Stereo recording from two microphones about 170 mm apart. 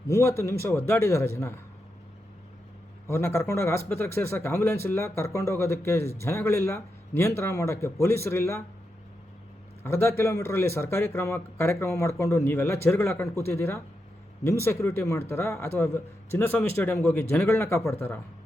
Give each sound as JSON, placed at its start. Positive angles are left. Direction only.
{"t": 0.1, "sound": "speech", "side_deg": 15}
{"t": 3.1, "sound": "speech", "side_deg": 15}
{"t": 9.8, "sound": "speech", "side_deg": 15}